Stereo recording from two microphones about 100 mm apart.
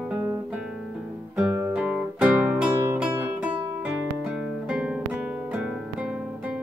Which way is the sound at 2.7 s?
30° right (ahead or behind).